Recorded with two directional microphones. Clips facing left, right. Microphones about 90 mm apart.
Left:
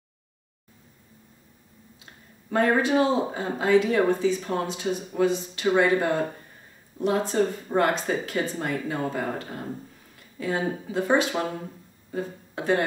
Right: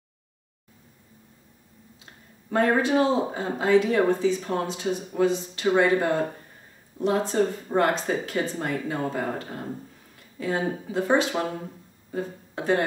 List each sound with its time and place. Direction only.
2.5 s speech: 30° right (ahead or behind)